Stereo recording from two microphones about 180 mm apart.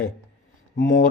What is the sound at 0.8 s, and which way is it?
Speech, 90° left.